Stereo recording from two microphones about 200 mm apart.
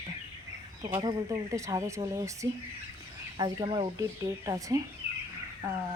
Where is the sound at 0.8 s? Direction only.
20° right (ahead or behind).